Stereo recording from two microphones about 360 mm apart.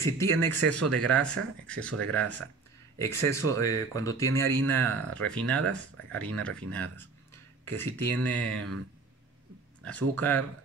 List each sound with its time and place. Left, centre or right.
0.0 s speech: centre
9.8 s speech: centre